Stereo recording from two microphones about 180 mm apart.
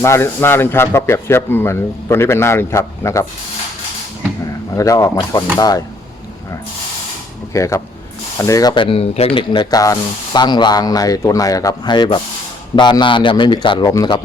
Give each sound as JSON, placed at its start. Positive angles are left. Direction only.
{"t": 0.0, "sound": "speech", "side_deg": 15}
{"t": 4.8, "sound": "speech", "side_deg": 20}
{"t": 7.5, "sound": "speech", "side_deg": 15}